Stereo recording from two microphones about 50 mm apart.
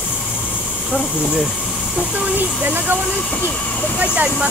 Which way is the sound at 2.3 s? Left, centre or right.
Right.